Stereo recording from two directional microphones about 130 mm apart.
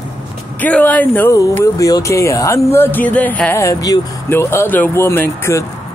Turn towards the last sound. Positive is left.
turn(degrees=20)  # may be behind; listen again after turning